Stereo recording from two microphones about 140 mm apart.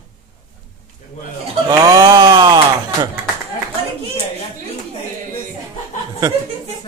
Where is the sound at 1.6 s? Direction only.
30° right (ahead or behind).